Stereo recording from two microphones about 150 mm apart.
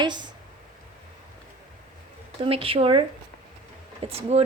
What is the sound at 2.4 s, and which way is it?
Speech, 40° right (ahead or behind).